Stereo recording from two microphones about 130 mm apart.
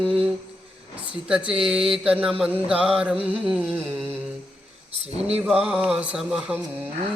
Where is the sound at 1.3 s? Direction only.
10° right (ahead or behind).